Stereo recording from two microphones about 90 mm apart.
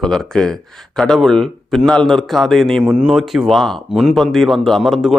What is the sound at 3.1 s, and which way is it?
Speech, centre (ahead or behind).